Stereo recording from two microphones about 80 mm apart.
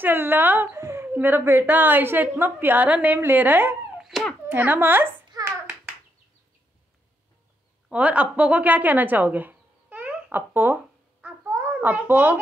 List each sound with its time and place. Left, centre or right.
0.0 s a woman's voice: right
4.1 s a child's voice: centre
4.5 s a woman's voice: right
5.4 s hands: right
7.9 s speech: centre
11.5 s a sound: right
11.9 s a woman's voice: right